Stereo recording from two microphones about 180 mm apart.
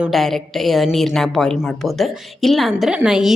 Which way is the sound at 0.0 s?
Centre (ahead or behind).